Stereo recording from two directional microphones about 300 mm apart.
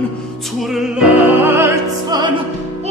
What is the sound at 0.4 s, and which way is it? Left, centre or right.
Music, centre.